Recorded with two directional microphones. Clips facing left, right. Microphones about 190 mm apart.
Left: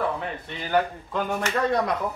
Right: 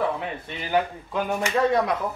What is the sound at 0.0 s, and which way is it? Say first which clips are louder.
Speech: right 1 dB; 10° right (ahead or behind).